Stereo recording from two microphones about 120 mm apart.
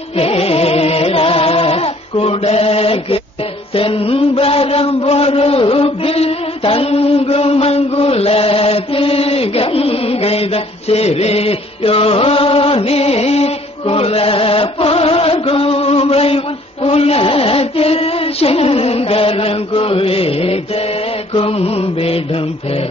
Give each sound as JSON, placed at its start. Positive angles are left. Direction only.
{"t": 0.1, "sound": "music", "side_deg": 55}
{"t": 3.7, "sound": "mantra", "side_deg": 50}
{"t": 16.8, "sound": "music", "side_deg": 55}